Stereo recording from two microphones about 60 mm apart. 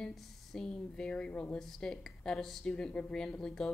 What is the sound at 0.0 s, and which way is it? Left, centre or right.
Speech, centre.